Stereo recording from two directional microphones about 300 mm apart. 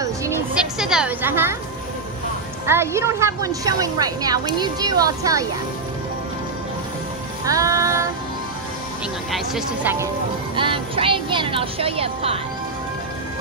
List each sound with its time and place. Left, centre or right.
0.7 s a woman's voice: centre
2.6 s a woman's voice: centre
7.4 s music: centre
9.3 s speech: centre
10.5 s a woman's voice: centre